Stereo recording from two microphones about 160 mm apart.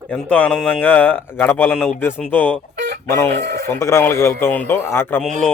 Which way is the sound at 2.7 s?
90° right.